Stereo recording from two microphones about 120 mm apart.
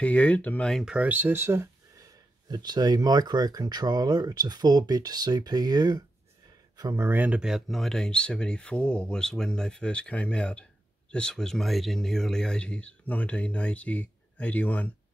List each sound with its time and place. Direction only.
0.0 s speech: 10° left (ahead or behind)
0.8 s speech: 10° right (ahead or behind)
2.4 s speech: 35° right (ahead or behind)
6.8 s speech: 20° right (ahead or behind); by 14.9 s 15° left (ahead or behind)